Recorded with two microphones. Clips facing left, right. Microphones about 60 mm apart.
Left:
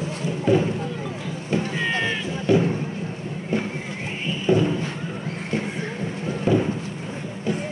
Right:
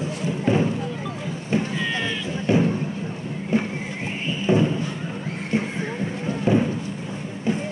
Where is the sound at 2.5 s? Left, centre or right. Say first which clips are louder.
Left 1 dB; right.